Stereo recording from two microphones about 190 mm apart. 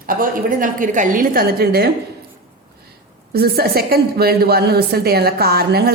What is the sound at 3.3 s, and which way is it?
A woman's voice, 55° right (ahead or behind).